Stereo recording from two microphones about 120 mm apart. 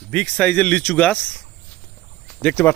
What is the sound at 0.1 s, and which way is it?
Speech, 10° left (ahead or behind).